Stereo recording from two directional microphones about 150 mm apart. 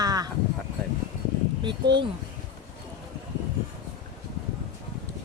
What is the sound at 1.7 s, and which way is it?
Speech, 35° right (ahead or behind).